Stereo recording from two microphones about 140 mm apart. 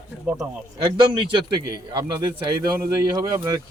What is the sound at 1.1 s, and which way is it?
Speech, 35° right (ahead or behind).